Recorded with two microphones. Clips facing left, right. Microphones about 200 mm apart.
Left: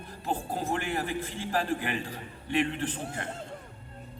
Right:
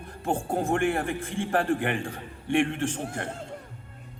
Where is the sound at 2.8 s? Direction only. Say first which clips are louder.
Right 4 dB; 75° right (ahead or behind).